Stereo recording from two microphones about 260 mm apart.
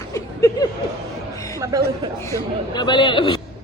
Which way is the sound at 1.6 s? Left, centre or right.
Centre.